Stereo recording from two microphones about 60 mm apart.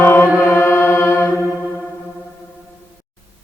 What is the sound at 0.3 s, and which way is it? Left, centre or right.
Music, left.